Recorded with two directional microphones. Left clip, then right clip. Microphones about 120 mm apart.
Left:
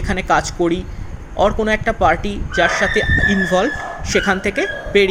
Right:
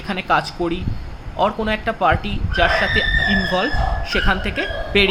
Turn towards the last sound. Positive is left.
turn(degrees=45)  # may be behind; listen again after turning